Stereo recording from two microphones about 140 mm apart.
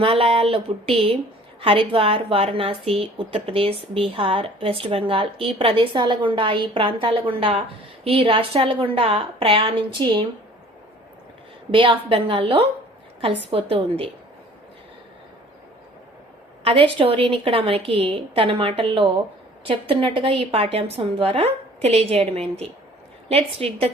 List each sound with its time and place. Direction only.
0.0 s a woman's voice: 40° right (ahead or behind)
11.7 s a woman's voice: 40° right (ahead or behind)
16.6 s a woman's voice: 40° right (ahead or behind)